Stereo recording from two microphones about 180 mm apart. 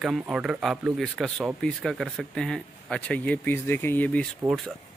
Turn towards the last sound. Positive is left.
turn(degrees=-20)  # may be behind; listen again after turning